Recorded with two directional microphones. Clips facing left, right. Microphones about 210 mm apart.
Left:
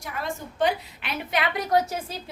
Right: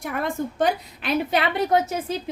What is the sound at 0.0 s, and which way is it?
Speech, 55° right (ahead or behind).